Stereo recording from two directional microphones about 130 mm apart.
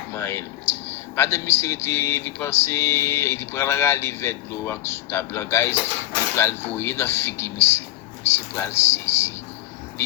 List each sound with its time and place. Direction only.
0.1 s speech: 20° left (ahead or behind)